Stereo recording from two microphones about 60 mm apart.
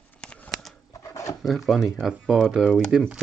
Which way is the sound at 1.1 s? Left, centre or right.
Left.